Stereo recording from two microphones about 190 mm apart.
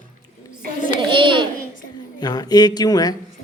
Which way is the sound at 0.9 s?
25° right (ahead or behind).